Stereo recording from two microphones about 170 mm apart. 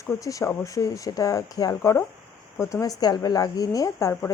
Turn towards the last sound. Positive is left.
turn(degrees=15)  # may be behind; listen again after turning